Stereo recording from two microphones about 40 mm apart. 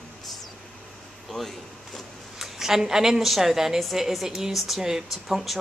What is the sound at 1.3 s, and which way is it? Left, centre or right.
Speech, centre.